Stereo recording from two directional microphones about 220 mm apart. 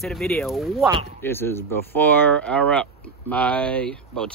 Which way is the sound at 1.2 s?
10° left (ahead or behind).